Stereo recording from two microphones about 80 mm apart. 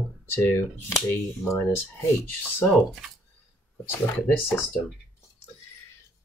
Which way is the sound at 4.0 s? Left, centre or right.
Left.